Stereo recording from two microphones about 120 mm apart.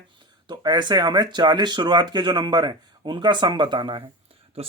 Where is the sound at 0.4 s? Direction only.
35° right (ahead or behind).